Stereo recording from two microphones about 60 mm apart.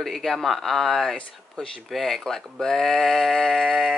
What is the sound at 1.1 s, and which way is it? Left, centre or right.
Speech, centre.